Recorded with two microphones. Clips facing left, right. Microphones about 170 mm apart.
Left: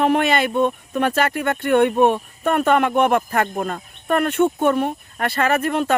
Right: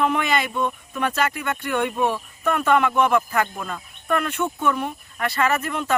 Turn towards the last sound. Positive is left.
turn(degrees=60)  # may be behind; listen again after turning